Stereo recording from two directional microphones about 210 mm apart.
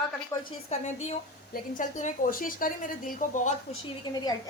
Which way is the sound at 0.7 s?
30° left (ahead or behind).